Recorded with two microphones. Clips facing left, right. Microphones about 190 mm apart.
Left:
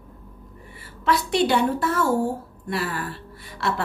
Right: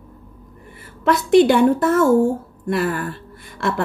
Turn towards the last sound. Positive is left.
turn(degrees=-50)  # may be behind; listen again after turning